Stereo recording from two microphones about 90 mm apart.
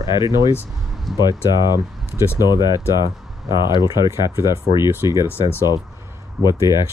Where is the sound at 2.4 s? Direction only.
50° left (ahead or behind).